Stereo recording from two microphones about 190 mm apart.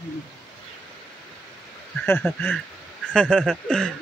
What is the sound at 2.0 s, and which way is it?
Speech, 10° left (ahead or behind).